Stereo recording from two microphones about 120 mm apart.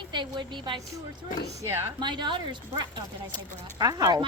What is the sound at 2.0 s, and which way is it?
A woman's voice, 40° right (ahead or behind).